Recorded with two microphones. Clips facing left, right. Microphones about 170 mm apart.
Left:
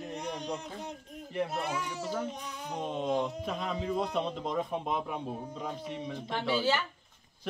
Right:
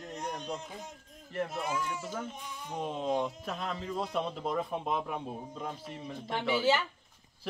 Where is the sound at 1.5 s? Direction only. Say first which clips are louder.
Even; 70° left (ahead or behind).